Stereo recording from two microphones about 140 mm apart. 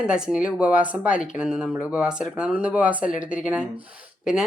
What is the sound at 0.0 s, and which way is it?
Speech, 5° right (ahead or behind).